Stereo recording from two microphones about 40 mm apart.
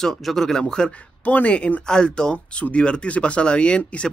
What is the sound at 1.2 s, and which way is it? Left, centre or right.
Speech, left.